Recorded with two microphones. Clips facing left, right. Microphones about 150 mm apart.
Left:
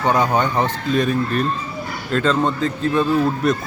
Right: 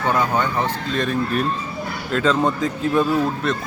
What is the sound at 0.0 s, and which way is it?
Speech, 15° left (ahead or behind).